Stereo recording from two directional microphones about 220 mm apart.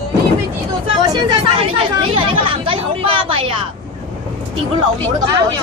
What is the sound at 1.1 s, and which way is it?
Chatter, 20° right (ahead or behind).